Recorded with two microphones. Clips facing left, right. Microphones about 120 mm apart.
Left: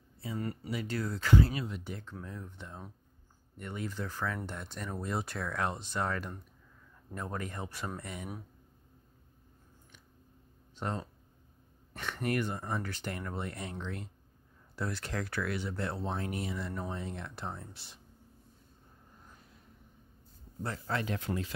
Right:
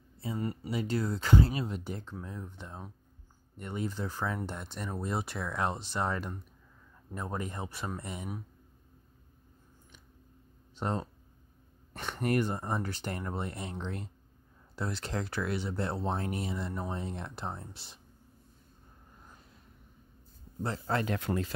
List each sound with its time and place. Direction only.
0.2 s speech: 25° right (ahead or behind)
2.2 s speech: 20° right (ahead or behind)
10.8 s speech: 30° right (ahead or behind)
20.6 s speech: 30° right (ahead or behind)
21.0 s speech: 55° right (ahead or behind)